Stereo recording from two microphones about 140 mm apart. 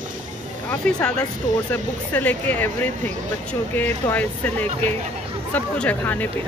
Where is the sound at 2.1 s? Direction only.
10° left (ahead or behind).